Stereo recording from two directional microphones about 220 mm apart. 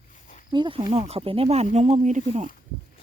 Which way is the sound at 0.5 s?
20° right (ahead or behind).